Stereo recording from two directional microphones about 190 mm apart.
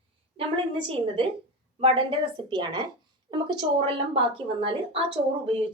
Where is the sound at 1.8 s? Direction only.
25° right (ahead or behind).